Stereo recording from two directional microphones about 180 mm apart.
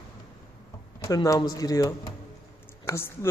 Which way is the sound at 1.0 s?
20° left (ahead or behind).